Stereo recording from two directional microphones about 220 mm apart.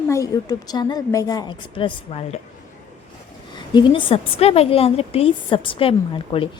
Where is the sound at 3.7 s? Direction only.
20° left (ahead or behind).